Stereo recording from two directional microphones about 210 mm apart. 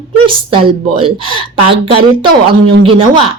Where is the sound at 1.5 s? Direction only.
25° right (ahead or behind).